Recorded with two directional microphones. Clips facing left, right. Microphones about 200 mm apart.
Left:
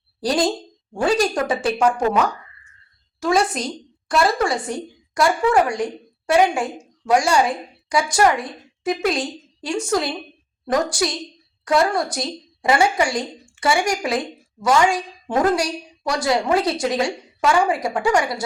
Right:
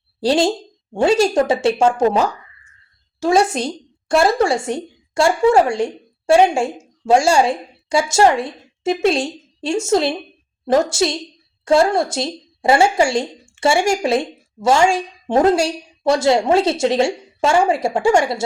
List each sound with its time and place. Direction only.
0.2 s a woman's voice: 25° right (ahead or behind)